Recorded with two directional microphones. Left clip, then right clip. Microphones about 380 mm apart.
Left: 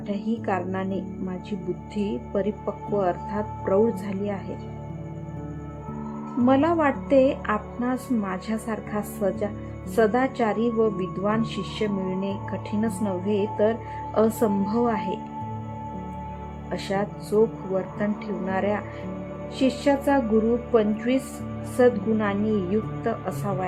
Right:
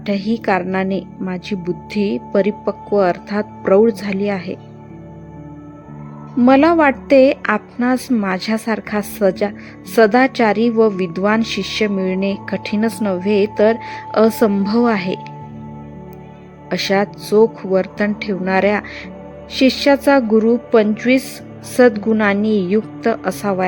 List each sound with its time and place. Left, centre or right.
0.0 s speech: centre
6.4 s speech: centre
16.6 s speech: centre